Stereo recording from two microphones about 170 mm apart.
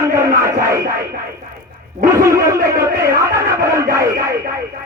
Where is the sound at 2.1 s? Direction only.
20° right (ahead or behind).